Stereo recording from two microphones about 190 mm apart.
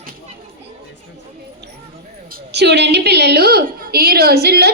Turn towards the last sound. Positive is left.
turn(degrees=-60)  # may be behind; listen again after turning